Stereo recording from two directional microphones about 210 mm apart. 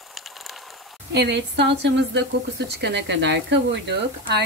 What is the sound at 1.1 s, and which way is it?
A woman's voice, 55° right (ahead or behind).